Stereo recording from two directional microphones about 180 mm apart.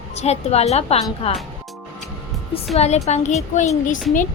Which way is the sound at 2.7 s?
35° left (ahead or behind).